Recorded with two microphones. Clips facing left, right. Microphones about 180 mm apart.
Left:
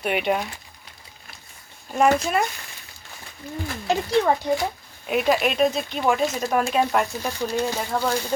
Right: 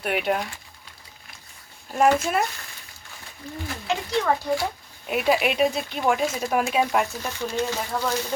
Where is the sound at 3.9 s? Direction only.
35° left (ahead or behind).